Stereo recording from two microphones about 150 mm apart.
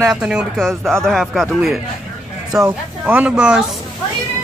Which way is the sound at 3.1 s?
10° right (ahead or behind).